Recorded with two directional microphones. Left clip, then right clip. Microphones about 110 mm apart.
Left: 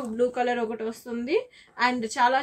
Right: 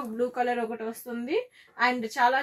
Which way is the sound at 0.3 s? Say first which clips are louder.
Left 2 dB; 15° left (ahead or behind).